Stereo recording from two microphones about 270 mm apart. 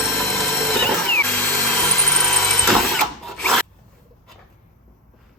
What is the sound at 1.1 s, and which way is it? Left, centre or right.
Drill, centre.